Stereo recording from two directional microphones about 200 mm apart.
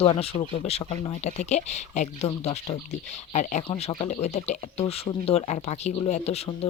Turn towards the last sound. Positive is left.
turn(degrees=30)  # may be behind; listen again after turning